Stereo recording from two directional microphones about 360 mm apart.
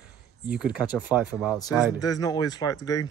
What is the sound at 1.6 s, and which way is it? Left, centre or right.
Speech, centre.